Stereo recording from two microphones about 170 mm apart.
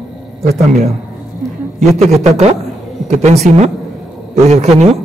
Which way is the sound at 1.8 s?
40° right (ahead or behind).